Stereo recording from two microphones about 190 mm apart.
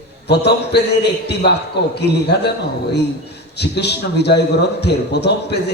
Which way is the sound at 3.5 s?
60° left (ahead or behind).